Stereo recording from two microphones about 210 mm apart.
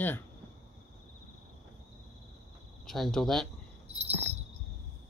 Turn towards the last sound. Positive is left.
turn(degrees=-30)  # may be behind; listen again after turning